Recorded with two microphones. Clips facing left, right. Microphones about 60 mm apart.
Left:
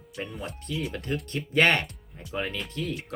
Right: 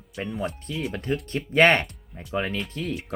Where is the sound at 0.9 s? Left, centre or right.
Right.